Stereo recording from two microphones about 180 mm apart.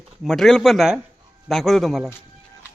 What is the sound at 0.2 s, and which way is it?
Speech, centre (ahead or behind).